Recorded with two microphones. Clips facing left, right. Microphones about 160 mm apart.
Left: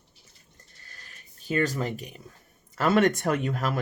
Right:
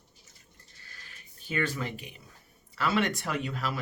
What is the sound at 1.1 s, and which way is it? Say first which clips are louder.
Speech: left 7 dB; 40° left (ahead or behind).